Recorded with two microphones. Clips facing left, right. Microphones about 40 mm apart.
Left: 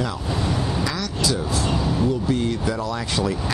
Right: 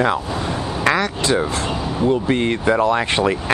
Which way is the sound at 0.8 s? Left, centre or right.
Right.